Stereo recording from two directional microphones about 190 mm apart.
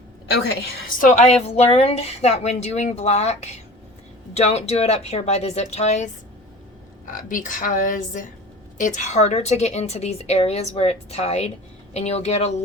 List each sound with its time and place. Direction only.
0.3 s a woman's voice: 60° left (ahead or behind)
0.9 s a woman's voice: 40° left (ahead or behind)